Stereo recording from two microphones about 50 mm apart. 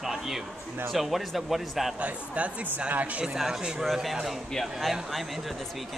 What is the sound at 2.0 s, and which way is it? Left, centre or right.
Speech, right.